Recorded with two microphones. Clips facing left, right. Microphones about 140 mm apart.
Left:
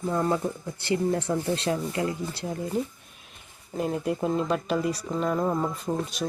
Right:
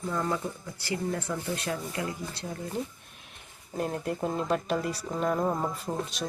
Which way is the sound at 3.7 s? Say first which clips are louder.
Left 4 dB; 5° left (ahead or behind).